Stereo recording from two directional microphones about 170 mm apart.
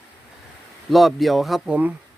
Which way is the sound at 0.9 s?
Centre (ahead or behind).